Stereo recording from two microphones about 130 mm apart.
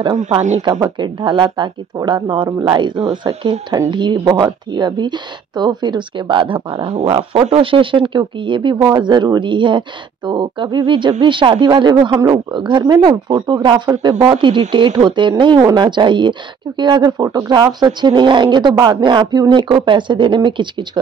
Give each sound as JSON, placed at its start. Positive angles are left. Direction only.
{"t": 0.6, "sound": "speech", "side_deg": -35}